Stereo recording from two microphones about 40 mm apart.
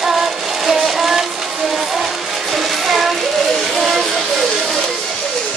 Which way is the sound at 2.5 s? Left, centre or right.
Centre.